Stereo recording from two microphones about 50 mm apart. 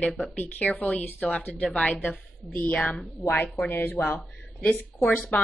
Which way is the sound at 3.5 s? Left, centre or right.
Left.